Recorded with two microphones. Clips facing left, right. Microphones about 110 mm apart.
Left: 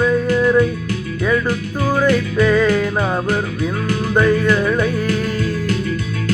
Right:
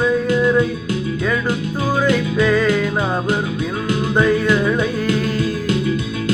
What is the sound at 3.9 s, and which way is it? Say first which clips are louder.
Music: even; 20° right (ahead or behind).